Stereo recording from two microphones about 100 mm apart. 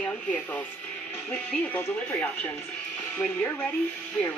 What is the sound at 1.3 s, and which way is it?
Speech, 20° left (ahead or behind).